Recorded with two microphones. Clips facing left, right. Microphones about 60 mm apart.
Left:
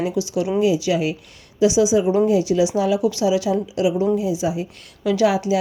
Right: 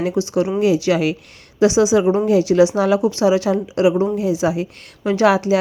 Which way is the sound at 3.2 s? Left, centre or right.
Right.